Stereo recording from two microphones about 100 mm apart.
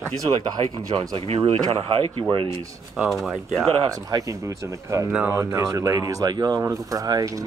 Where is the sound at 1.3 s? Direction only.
85° right.